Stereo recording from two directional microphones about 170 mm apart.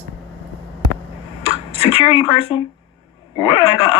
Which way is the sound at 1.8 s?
30° left (ahead or behind).